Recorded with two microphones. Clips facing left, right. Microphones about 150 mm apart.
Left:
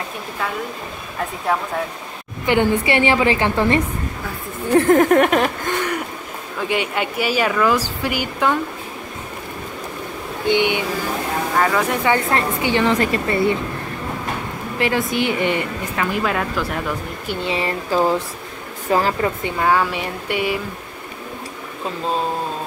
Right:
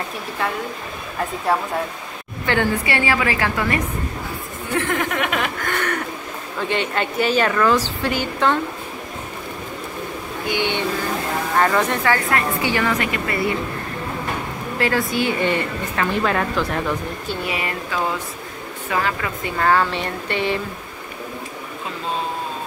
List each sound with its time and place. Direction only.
1.5 s speech: 5° right (ahead or behind)
2.4 s a woman's voice: 15° left (ahead or behind); by 5.5 s 40° left (ahead or behind)
5.6 s a sound: 20° left (ahead or behind)
6.7 s a woman's voice: 10° left (ahead or behind)
10.5 s a woman's voice: 15° left (ahead or behind)
11.5 s speech: centre (ahead or behind)
12.0 s a woman's voice: 25° left (ahead or behind)
14.8 s a woman's voice: 20° left (ahead or behind)
16.2 s speech: 5° left (ahead or behind)
17.3 s a woman's voice: 25° left (ahead or behind)
19.6 s a woman's voice: 10° left (ahead or behind)